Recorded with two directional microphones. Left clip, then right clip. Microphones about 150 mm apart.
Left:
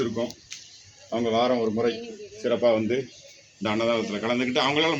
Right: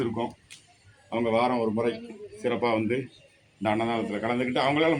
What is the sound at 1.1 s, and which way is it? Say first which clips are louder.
A man's voice: left 2 dB; 25° right (ahead or behind).